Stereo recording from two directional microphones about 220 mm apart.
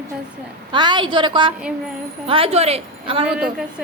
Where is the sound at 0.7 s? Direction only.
20° right (ahead or behind).